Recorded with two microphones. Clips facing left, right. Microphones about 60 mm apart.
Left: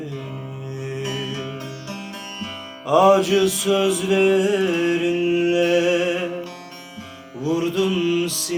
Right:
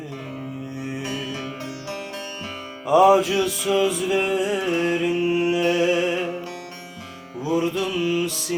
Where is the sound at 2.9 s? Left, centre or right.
Centre.